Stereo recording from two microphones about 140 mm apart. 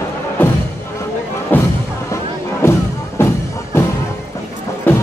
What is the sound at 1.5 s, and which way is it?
Music, 15° left (ahead or behind).